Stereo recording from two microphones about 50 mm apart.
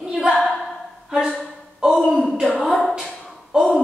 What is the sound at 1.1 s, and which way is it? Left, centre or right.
Speech, right.